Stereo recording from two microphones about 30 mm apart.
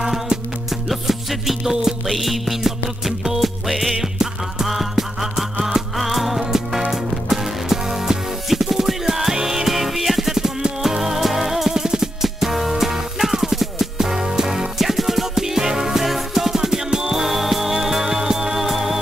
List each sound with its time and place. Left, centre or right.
0.7 s music: centre
1.6 s music: centre
2.0 s music: centre
4.0 s music: centre